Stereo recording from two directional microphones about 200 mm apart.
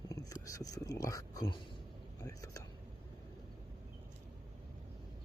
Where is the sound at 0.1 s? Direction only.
15° left (ahead or behind).